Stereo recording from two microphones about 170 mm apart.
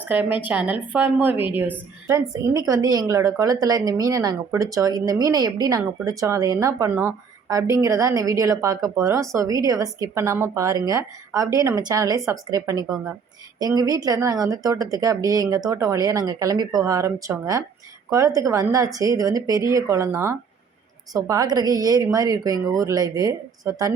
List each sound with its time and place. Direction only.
0.0 s a woman's voice: 10° right (ahead or behind)